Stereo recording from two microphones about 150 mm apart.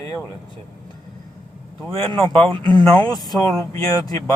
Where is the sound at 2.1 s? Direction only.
35° right (ahead or behind).